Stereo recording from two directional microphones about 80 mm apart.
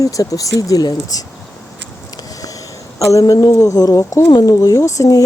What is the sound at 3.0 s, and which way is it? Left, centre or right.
Speech, left.